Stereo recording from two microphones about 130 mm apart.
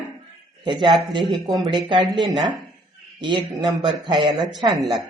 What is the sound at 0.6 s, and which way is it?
Speech, 40° right (ahead or behind).